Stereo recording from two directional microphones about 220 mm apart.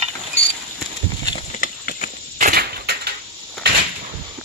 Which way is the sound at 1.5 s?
35° left (ahead or behind).